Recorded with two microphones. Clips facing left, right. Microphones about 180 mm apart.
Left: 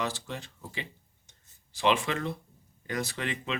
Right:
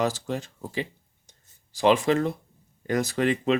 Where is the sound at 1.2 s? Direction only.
40° right (ahead or behind).